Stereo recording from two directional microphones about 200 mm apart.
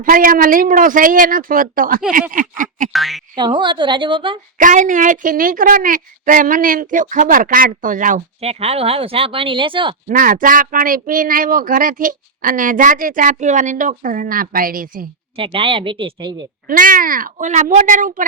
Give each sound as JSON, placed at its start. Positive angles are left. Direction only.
{"t": 0.0, "sound": "a woman's voice", "side_deg": -45}
{"t": 2.9, "sound": "speech", "side_deg": 0}
{"t": 3.3, "sound": "a man's voice", "side_deg": -25}
{"t": 4.5, "sound": "a woman's voice", "side_deg": -40}
{"t": 10.1, "sound": "speech", "side_deg": -40}
{"t": 15.4, "sound": "a man's voice", "side_deg": -25}
{"t": 16.6, "sound": "a woman's voice", "side_deg": -45}